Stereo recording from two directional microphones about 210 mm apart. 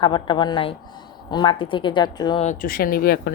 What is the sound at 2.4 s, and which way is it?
Speech, 40° left (ahead or behind).